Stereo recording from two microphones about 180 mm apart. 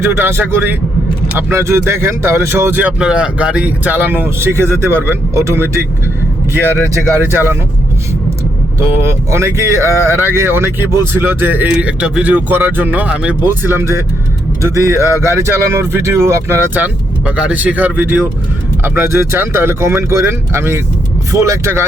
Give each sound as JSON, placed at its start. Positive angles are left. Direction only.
{"t": 0.0, "sound": "speech", "side_deg": -15}
{"t": 7.2, "sound": "speech", "side_deg": -10}
{"t": 8.8, "sound": "speech", "side_deg": -15}